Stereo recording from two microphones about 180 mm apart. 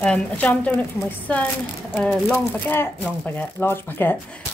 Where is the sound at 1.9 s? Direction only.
Centre (ahead or behind).